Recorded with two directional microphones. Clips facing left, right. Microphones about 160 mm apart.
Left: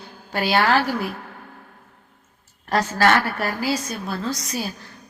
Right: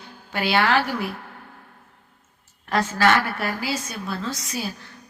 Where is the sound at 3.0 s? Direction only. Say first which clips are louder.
Left 1 dB; 40° left (ahead or behind).